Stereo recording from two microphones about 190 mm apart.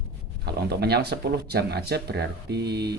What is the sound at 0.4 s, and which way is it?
Speech, 60° right (ahead or behind).